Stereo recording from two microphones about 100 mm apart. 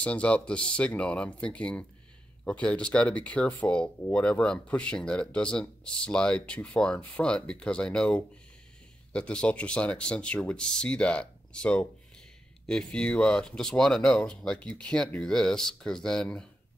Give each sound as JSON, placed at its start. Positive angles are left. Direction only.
{"t": 0.0, "sound": "speech", "side_deg": 10}